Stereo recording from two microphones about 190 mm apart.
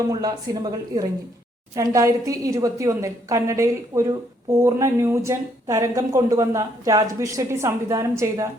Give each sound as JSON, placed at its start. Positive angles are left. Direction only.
{"t": 0.1, "sound": "speech", "side_deg": -20}